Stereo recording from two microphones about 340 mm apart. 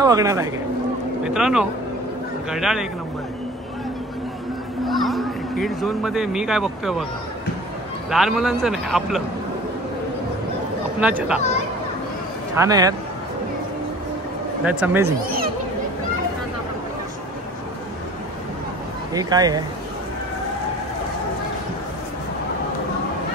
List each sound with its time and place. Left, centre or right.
0.0 s a man's voice: centre
4.8 s speech: centre
8.1 s a man's voice: centre
11.0 s a man's voice: centre
12.5 s speech: centre
14.6 s a man's voice: centre
15.0 s speech: right
19.1 s speech: centre